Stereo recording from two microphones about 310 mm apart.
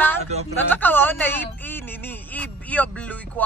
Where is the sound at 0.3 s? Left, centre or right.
Right.